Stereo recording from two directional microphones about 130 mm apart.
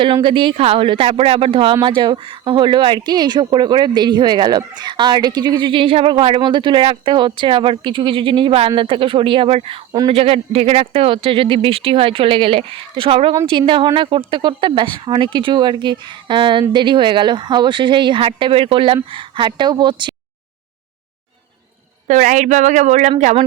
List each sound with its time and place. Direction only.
0.0 s speech: 40° right (ahead or behind)
22.0 s a woman's voice: 75° right (ahead or behind)